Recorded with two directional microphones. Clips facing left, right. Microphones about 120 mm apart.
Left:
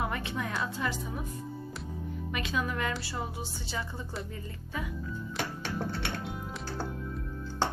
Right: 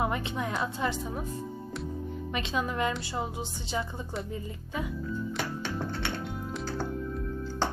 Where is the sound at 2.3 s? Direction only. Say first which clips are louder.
Right 2 dB; 25° right (ahead or behind).